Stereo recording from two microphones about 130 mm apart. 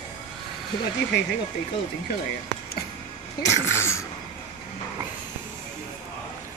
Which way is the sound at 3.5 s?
20° left (ahead or behind).